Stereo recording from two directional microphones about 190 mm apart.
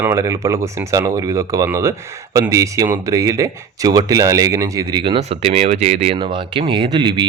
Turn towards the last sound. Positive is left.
turn(degrees=-25)  # may be behind; listen again after turning